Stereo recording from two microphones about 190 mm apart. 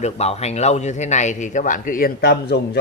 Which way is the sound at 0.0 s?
35° left (ahead or behind).